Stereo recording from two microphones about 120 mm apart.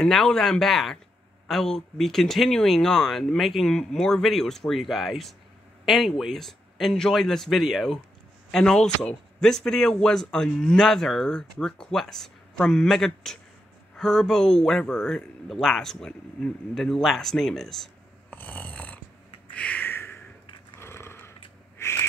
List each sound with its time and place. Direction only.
0.0 s a man's voice: 5° left (ahead or behind)
18.3 s snoring: 15° left (ahead or behind)
19.5 s a sound: 10° left (ahead or behind)
21.7 s owl: 20° left (ahead or behind)